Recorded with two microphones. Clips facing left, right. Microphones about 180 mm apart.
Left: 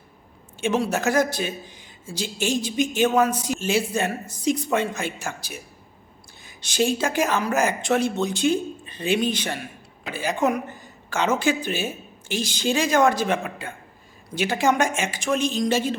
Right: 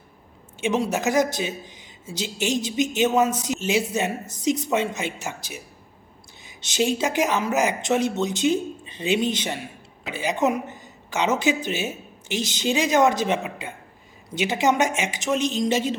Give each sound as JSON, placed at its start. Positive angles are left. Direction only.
{"t": 0.6, "sound": "speech", "side_deg": -15}
{"t": 6.6, "sound": "a woman's voice", "side_deg": -20}